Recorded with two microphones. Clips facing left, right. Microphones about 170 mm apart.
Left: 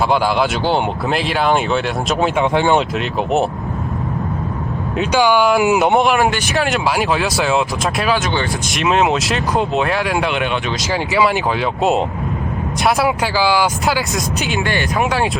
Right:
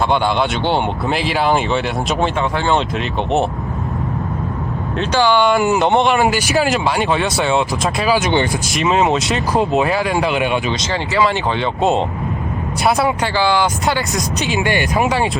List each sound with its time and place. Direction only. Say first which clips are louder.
0.1 s speech: left 1 dB; centre (ahead or behind)
2.4 s speech: left 3 dB; 15° left (ahead or behind)
2.7 s speech: left 1 dB; centre (ahead or behind)
4.9 s speech: left 1 dB; 10° left (ahead or behind)
8.2 s speech: right 4 dB; 20° right (ahead or behind)
8.7 s speech: even; centre (ahead or behind)
11.1 s speech: even; 15° left (ahead or behind)
14.6 s speech: right 3 dB; 15° right (ahead or behind)
14.9 s speech: even; centre (ahead or behind)